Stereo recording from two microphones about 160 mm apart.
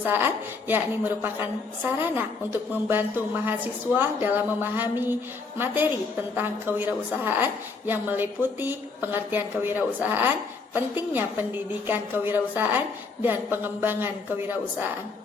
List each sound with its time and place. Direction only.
0.0 s a woman's voice: 10° right (ahead or behind)